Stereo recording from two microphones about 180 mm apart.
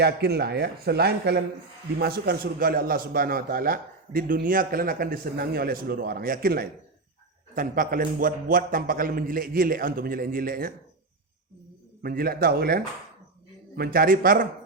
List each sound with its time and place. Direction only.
0.0 s a man's voice: 65° right (ahead or behind)
12.0 s a man's voice: 55° right (ahead or behind)